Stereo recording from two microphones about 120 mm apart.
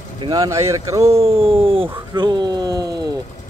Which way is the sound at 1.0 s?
55° right (ahead or behind).